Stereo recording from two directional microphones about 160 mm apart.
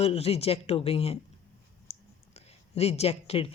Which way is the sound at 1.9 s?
45° left (ahead or behind).